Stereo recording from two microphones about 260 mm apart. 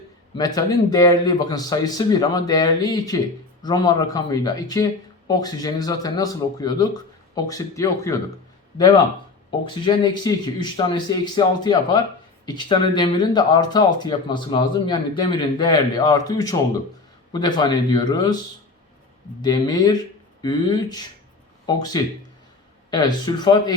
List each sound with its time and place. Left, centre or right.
0.3 s speech: centre
9.6 s speech: centre
19.4 s speech: centre